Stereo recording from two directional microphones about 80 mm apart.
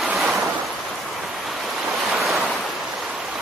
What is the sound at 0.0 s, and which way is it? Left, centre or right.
Waves, centre.